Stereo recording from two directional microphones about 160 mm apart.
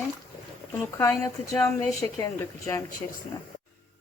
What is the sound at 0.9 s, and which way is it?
A woman's voice, 15° left (ahead or behind).